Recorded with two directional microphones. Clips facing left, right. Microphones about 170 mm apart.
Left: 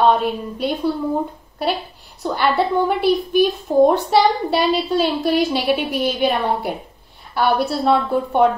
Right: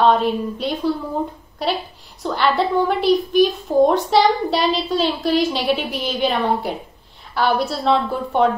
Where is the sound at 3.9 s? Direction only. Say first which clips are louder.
Even; 60° left (ahead or behind).